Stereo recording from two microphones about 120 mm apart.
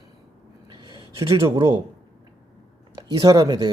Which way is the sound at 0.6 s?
40° right (ahead or behind).